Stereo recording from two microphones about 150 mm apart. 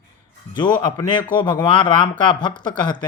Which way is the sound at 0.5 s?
30° left (ahead or behind).